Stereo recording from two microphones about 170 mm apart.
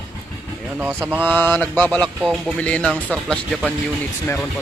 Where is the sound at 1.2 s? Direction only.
10° left (ahead or behind).